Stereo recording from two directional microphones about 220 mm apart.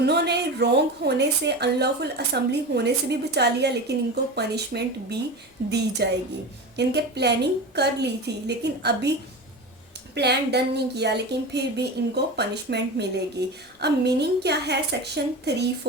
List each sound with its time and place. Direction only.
0.0 s a woman's voice: 50° right (ahead or behind)
10.2 s a woman's voice: 50° right (ahead or behind)